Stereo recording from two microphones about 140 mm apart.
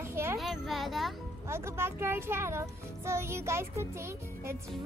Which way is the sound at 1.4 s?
20° right (ahead or behind).